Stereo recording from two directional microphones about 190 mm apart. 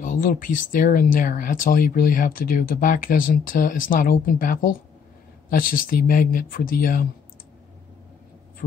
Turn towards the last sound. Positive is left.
turn(degrees=50)  # may be behind; listen again after turning